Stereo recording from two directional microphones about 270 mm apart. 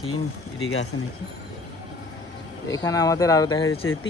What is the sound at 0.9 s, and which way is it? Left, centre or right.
Speech, left.